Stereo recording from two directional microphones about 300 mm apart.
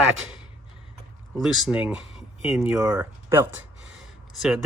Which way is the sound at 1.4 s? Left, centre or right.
Centre.